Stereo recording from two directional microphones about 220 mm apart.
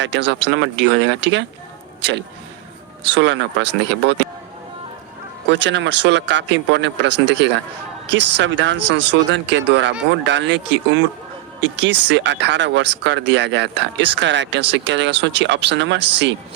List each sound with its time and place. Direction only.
0.0 s speech: 55° right (ahead or behind)
5.5 s speech: 55° right (ahead or behind)